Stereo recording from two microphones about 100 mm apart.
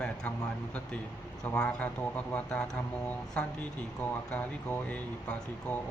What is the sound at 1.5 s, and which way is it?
Speech, 10° left (ahead or behind).